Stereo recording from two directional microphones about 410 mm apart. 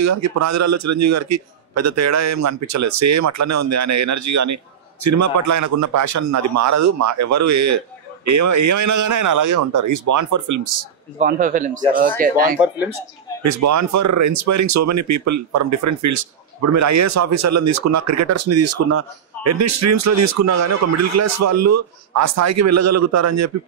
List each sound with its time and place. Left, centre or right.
0.0 s speech: right
11.1 s a man's voice: centre
12.5 s speech: centre
13.4 s speech: right